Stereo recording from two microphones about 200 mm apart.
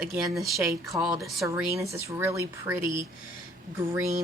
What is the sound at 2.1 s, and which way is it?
Speech, 15° right (ahead or behind).